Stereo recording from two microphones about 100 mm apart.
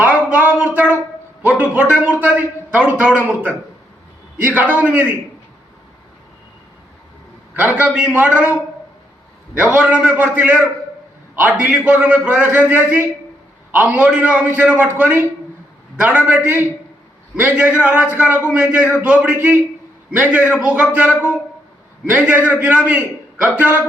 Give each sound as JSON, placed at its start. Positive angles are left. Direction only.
{"t": 0.0, "sound": "a sound", "side_deg": -15}
{"t": 1.4, "sound": "a man's voice", "side_deg": -15}
{"t": 7.5, "sound": "a man's voice", "side_deg": -15}
{"t": 9.6, "sound": "a man's voice", "side_deg": -15}